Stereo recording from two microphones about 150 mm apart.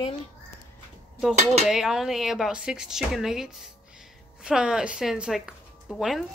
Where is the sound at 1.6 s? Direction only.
5° right (ahead or behind).